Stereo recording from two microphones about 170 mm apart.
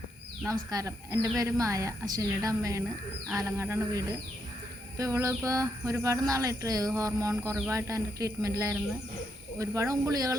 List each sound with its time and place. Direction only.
0.4 s a woman's voice: 20° right (ahead or behind)